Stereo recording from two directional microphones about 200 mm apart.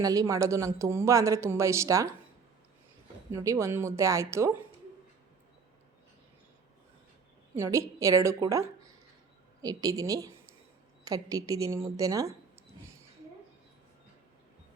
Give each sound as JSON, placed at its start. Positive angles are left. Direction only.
{"t": 0.0, "sound": "a woman's voice", "side_deg": -15}
{"t": 3.3, "sound": "a woman's voice", "side_deg": -15}
{"t": 7.5, "sound": "a woman's voice", "side_deg": -15}